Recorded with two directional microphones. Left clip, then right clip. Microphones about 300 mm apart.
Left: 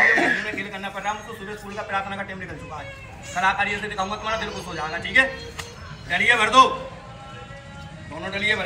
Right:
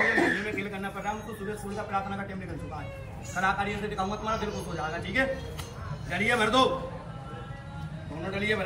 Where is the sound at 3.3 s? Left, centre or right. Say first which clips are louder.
Left 6 dB; centre.